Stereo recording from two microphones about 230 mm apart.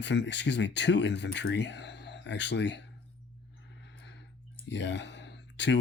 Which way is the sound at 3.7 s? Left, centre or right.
Left.